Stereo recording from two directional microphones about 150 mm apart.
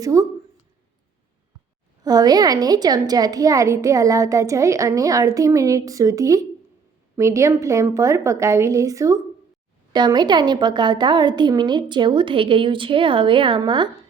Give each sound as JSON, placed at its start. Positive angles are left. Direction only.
{"t": 0.0, "sound": "a woman's voice", "side_deg": -20}
{"t": 2.0, "sound": "a woman's voice", "side_deg": -25}